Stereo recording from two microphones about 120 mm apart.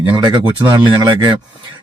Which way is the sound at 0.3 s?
40° right (ahead or behind).